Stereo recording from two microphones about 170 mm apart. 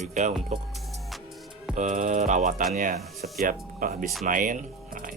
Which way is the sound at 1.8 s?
45° right (ahead or behind).